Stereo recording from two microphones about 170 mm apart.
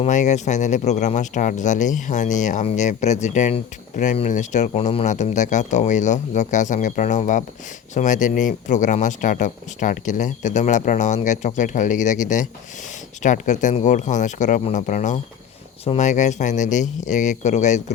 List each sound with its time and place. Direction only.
0.0 s speech: 45° left (ahead or behind)